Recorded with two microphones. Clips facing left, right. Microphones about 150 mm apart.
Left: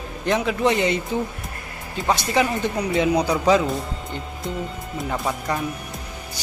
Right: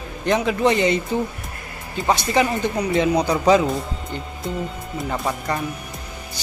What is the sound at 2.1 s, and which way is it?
Speech, centre (ahead or behind).